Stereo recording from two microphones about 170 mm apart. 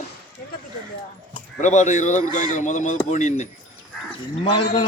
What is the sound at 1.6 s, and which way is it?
Speech, 45° left (ahead or behind).